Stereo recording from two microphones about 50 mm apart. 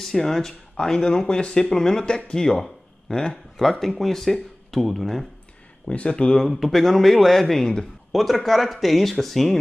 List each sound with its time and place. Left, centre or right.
0.0 s speech: centre
4.0 s speech: centre
5.9 s speech: left
6.3 s speech: centre
8.1 s speech: centre